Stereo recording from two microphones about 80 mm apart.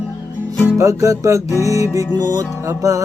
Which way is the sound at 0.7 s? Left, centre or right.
Right.